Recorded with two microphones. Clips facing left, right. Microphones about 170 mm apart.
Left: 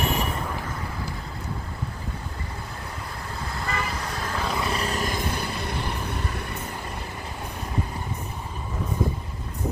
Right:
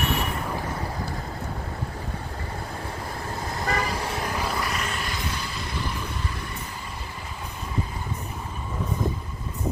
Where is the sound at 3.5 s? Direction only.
40° right (ahead or behind).